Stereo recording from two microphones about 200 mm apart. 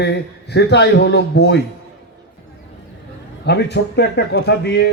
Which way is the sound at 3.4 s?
60° left (ahead or behind).